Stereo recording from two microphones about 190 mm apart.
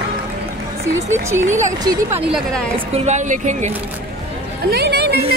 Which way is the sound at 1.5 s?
40° right (ahead or behind).